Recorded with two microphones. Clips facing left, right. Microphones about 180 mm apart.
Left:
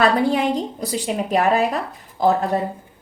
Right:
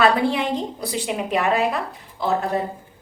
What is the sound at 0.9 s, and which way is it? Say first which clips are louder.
A woman's voice: left 2 dB; 40° left (ahead or behind).